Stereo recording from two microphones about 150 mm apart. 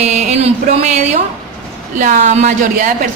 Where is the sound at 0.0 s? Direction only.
50° right (ahead or behind).